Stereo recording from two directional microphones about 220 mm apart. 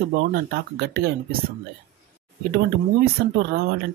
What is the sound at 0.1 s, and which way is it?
Speech, 45° right (ahead or behind).